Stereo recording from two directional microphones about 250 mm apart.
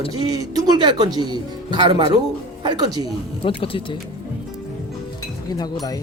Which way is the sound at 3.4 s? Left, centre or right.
Left.